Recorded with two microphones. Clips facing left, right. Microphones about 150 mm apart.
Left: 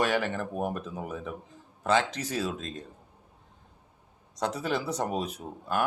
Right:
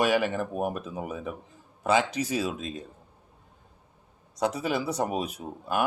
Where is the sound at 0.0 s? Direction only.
10° right (ahead or behind).